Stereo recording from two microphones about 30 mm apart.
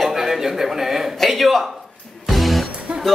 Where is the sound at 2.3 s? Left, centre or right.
Centre.